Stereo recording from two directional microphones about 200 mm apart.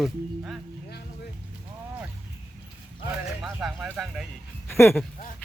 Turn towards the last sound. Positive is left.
turn(degrees=10)  # may be behind; listen again after turning